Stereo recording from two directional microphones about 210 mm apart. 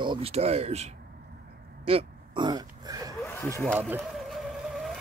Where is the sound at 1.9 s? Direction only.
25° right (ahead or behind).